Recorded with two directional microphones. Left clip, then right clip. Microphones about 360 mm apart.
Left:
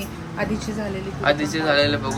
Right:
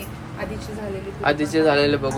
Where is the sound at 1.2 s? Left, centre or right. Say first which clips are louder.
Right 2 dB; centre.